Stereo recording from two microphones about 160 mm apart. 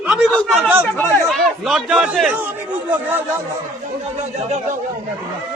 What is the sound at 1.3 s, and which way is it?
Chatter, centre (ahead or behind).